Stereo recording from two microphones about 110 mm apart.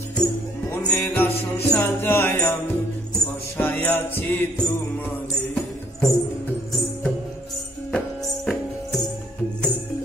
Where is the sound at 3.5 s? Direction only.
15° left (ahead or behind).